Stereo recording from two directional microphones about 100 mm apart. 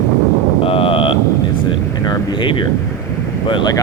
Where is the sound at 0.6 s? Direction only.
65° left (ahead or behind).